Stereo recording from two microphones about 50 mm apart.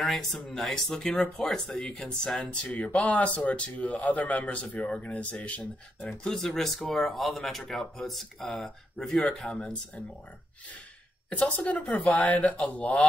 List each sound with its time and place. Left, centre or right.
0.0 s speech: centre
2.6 s speech: left
6.3 s speech: centre
11.2 s speech: left
11.9 s speech: centre
12.7 s speech: left